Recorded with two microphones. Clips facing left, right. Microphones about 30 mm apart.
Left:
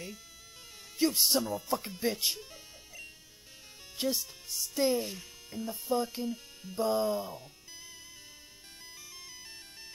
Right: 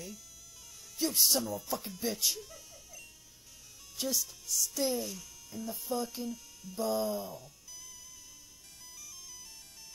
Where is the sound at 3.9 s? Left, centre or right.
Left.